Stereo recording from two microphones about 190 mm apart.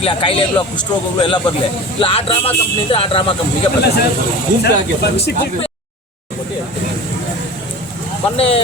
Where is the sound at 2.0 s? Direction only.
30° left (ahead or behind).